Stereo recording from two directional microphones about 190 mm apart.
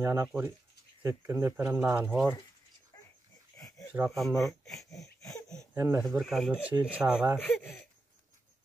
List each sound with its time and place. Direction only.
0.0 s speech: 15° right (ahead or behind)
2.9 s dog: 20° left (ahead or behind)
3.5 s a sound: 20° left (ahead or behind)
4.1 s speech: centre (ahead or behind)
4.7 s a sound: 15° left (ahead or behind)
5.8 s speech: 10° right (ahead or behind)
6.0 s speech: centre (ahead or behind)